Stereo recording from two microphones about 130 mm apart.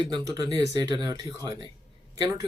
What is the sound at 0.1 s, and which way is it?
Speech, 30° right (ahead or behind).